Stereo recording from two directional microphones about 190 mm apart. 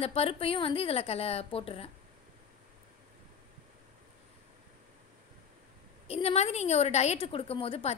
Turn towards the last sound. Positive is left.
turn(degrees=30)  # may be behind; listen again after turning